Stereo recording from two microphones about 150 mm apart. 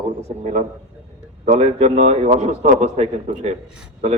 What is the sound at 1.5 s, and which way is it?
A man's voice, 45° right (ahead or behind).